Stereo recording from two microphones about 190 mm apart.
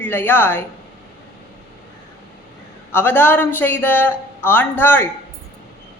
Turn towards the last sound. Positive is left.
turn(degrees=10)  # may be behind; listen again after turning